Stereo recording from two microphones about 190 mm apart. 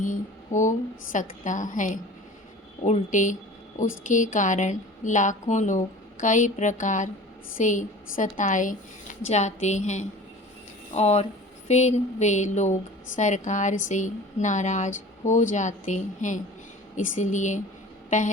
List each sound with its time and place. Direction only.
0.0 s a woman's voice: 40° left (ahead or behind)